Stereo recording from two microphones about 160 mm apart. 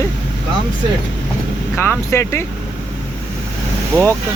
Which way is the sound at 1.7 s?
15° left (ahead or behind).